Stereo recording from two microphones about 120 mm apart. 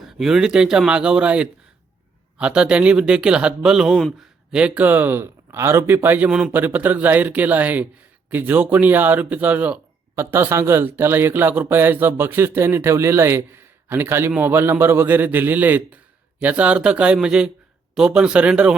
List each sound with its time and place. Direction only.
0.0 s speech: 5° right (ahead or behind)